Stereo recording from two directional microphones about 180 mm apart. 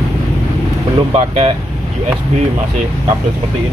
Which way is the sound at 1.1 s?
40° right (ahead or behind).